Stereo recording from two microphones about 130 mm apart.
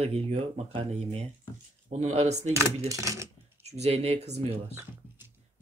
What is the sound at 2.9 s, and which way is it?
Speech, 25° right (ahead or behind).